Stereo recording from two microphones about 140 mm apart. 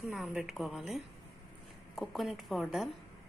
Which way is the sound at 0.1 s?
5° right (ahead or behind).